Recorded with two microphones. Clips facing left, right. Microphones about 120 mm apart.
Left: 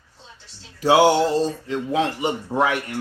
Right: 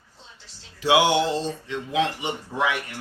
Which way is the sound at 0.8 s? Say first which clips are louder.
Left 4 dB; 40° left (ahead or behind).